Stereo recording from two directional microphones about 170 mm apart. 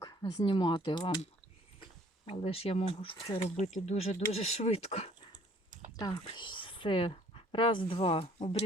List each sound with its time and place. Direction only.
0.0 s speech: 25° left (ahead or behind)
2.2 s speech: 35° left (ahead or behind)
6.0 s speech: 25° left (ahead or behind)